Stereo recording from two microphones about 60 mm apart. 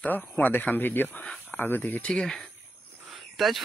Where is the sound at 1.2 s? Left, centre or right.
Centre.